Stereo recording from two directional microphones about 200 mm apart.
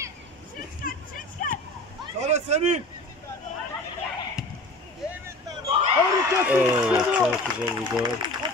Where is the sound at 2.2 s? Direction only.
35° right (ahead or behind).